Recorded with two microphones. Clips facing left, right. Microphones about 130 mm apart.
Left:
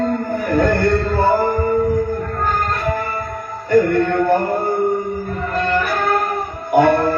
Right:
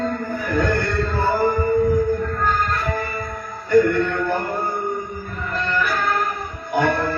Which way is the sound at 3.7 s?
45° left (ahead or behind).